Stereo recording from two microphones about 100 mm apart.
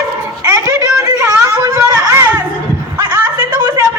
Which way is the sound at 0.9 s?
35° right (ahead or behind).